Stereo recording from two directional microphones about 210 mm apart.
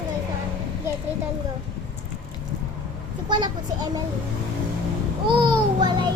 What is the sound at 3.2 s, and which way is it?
Child singing, 20° right (ahead or behind).